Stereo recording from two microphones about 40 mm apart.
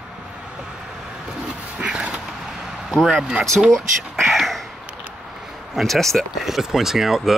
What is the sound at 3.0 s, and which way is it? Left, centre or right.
Speech, right.